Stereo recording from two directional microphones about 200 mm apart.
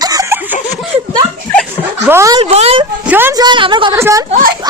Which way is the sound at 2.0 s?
15° right (ahead or behind).